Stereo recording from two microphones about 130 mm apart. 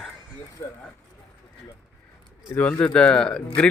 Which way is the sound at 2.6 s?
10° left (ahead or behind).